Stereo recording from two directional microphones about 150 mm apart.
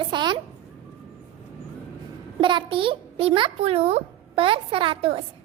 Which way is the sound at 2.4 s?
35° right (ahead or behind).